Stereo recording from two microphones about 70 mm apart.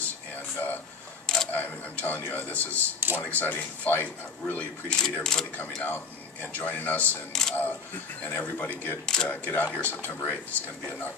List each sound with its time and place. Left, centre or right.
0.6 s a sound: left
1.2 s camera: centre
1.5 s speech: left
2.7 s speech: right
3.2 s speech: left
4.8 s speech: centre
5.8 s speech: left
7.3 s speech: centre
8.2 s speech: left
9.0 s speech: centre
9.3 s speech: left